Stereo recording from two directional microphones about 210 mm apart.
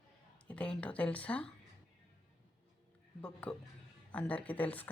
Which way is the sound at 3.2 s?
5° left (ahead or behind).